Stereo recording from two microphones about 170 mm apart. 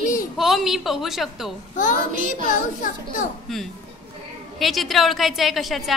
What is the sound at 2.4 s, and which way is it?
Speech, 50° left (ahead or behind).